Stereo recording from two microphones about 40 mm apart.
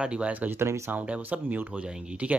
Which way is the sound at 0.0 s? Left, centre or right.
Right.